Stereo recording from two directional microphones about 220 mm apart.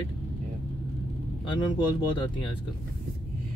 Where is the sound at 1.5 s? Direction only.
20° left (ahead or behind).